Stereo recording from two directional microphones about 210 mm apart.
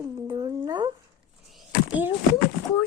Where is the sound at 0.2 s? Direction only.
15° right (ahead or behind).